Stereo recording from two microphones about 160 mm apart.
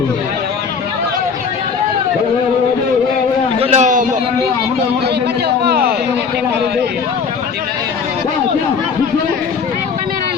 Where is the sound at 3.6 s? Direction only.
45° right (ahead or behind).